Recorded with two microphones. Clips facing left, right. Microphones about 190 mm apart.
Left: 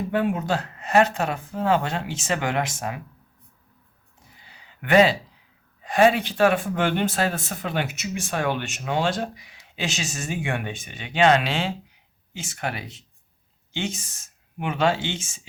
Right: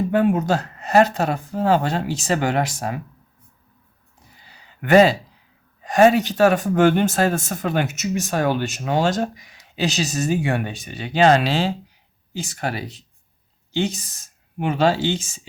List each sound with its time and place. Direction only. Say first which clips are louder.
0.1 s speech: right 4 dB; 45° right (ahead or behind)
4.4 s a sound: right 6 dB; 40° right (ahead or behind)
5.8 s speech: right 4 dB; 45° right (ahead or behind)